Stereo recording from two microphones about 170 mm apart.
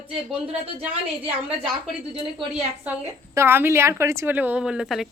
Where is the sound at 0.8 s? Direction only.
35° right (ahead or behind).